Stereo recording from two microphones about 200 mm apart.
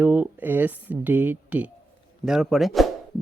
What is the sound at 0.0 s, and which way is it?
Speech, 10° right (ahead or behind).